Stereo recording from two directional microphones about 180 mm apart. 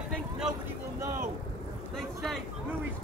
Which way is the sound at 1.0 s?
15° right (ahead or behind).